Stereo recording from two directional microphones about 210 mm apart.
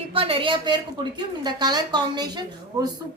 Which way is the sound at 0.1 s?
25° right (ahead or behind).